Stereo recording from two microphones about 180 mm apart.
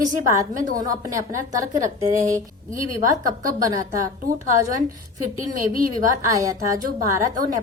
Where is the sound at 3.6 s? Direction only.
20° right (ahead or behind).